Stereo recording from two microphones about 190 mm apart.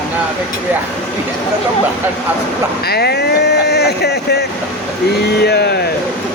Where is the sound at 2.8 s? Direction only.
55° left (ahead or behind).